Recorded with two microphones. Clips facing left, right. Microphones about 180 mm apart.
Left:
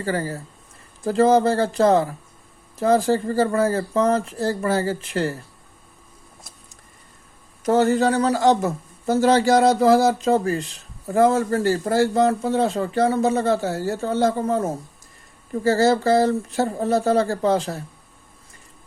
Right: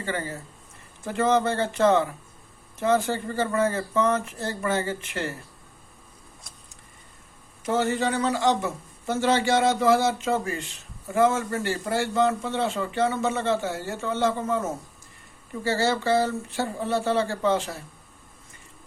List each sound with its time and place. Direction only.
0.0 s a man's voice: 35° left (ahead or behind)
7.6 s a man's voice: 40° left (ahead or behind)